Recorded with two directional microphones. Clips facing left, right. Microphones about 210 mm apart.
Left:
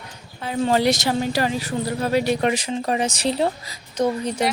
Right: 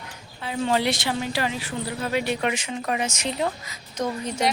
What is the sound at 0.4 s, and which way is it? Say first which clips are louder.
Speech: left 4 dB; 40° left (ahead or behind).